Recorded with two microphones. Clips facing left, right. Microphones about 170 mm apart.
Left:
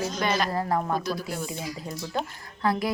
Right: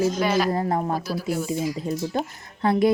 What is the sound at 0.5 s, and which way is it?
Speech, 25° right (ahead or behind).